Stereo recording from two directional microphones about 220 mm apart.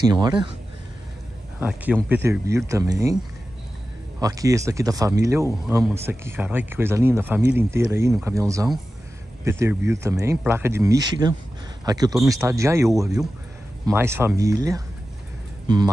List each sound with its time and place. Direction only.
0.1 s speech: 20° right (ahead or behind)
1.6 s speech: 5° right (ahead or behind)
4.2 s speech: 15° right (ahead or behind)